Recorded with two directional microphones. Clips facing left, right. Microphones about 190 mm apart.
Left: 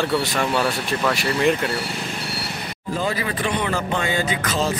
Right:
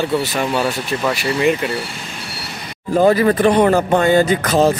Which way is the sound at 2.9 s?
50° right (ahead or behind).